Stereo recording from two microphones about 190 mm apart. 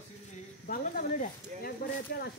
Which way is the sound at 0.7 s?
45° left (ahead or behind).